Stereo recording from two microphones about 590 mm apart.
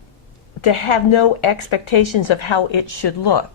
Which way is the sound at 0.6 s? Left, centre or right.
Left.